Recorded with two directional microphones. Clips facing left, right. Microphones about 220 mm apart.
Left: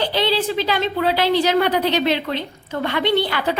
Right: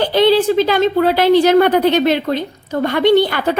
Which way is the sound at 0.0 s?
50° right (ahead or behind).